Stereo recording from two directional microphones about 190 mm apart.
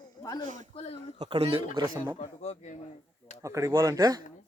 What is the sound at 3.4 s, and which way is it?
Speech, 15° right (ahead or behind).